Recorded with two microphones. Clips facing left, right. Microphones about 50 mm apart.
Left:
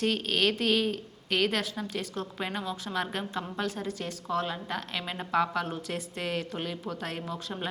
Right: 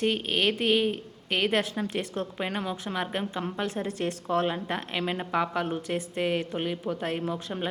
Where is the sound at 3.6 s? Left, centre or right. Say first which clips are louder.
Right 4 dB; right.